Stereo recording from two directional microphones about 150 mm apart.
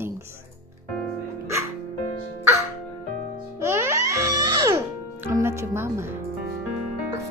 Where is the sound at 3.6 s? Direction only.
20° right (ahead or behind).